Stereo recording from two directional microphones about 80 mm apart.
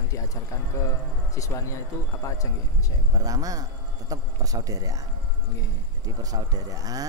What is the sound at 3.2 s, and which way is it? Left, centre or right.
A man's voice, right.